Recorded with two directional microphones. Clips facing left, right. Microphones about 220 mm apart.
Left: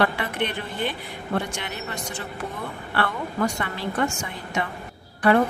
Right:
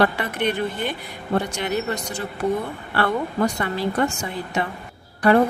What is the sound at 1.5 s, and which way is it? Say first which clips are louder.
Speech: right 8 dB; 40° right (ahead or behind).